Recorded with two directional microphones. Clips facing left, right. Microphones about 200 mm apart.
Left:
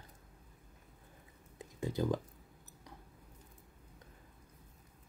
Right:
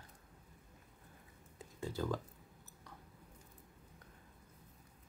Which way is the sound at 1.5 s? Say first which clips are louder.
Left 5 dB; 20° left (ahead or behind).